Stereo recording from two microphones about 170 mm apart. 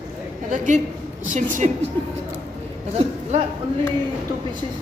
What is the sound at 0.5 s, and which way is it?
A woman's voice, 50° right (ahead or behind).